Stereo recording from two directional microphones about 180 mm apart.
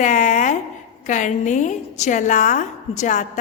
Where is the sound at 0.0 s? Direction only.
45° left (ahead or behind).